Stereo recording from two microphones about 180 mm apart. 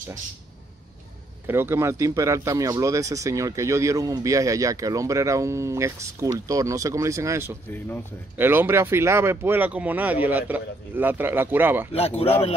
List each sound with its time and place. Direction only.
1.5 s speech: 15° right (ahead or behind)
11.9 s speech: 35° left (ahead or behind)